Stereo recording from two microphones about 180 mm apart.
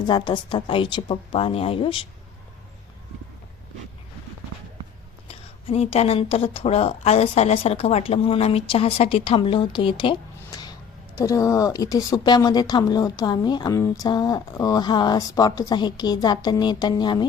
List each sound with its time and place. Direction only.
0.1 s speech: 25° left (ahead or behind)
5.3 s a woman's voice: 35° left (ahead or behind)